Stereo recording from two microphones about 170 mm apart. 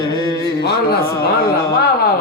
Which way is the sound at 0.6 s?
70° left (ahead or behind).